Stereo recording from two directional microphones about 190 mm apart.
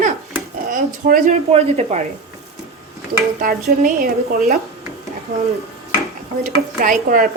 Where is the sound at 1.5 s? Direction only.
35° right (ahead or behind).